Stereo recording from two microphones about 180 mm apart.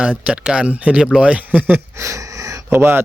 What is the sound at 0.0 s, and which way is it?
Speech, 5° right (ahead or behind).